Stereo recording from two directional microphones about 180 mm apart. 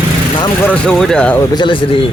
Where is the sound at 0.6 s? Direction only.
5° left (ahead or behind).